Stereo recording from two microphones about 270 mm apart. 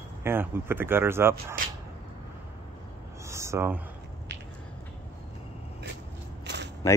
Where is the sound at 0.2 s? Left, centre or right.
Centre.